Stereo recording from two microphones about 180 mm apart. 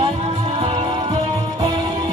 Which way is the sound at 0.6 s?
25° right (ahead or behind).